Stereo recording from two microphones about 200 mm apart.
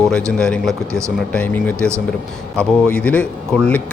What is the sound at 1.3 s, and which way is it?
Speech, 10° left (ahead or behind).